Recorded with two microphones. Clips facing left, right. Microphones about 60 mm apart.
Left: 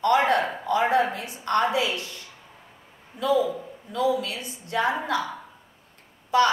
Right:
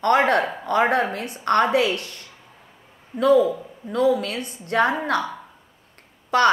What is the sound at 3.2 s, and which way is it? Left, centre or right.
A woman's voice, right.